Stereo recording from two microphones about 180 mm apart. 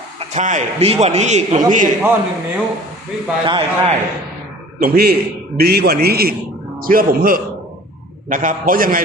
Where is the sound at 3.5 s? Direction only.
30° right (ahead or behind).